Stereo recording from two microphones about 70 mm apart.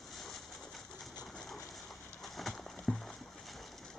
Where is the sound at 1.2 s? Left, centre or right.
Centre.